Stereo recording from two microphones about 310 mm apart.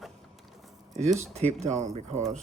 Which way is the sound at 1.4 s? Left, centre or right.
Right.